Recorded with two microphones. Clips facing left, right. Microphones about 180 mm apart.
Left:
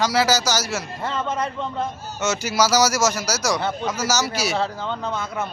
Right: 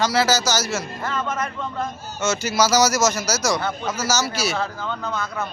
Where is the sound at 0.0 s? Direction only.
15° left (ahead or behind).